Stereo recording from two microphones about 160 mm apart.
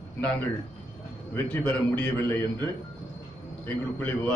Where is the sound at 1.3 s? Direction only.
10° left (ahead or behind).